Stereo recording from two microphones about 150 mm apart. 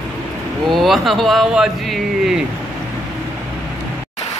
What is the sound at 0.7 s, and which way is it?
Speech, centre (ahead or behind).